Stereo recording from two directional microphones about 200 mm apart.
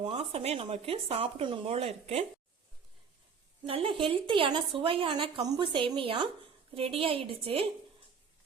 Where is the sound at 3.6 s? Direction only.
25° right (ahead or behind).